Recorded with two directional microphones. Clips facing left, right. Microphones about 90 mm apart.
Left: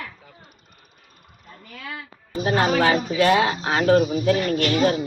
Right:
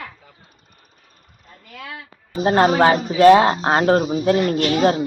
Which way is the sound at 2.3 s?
35° right (ahead or behind).